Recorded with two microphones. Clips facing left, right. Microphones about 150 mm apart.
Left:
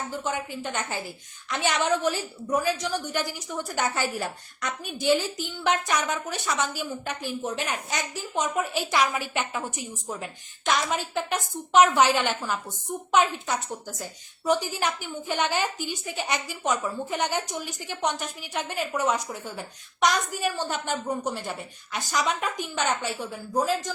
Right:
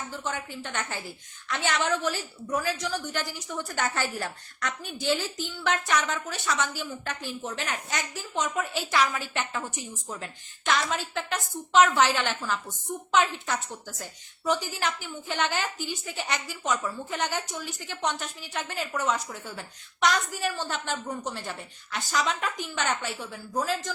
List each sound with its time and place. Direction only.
0.1 s a woman's voice: 15° left (ahead or behind)